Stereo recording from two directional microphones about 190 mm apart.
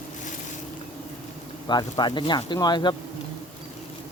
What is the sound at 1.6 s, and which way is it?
Speech, 25° left (ahead or behind).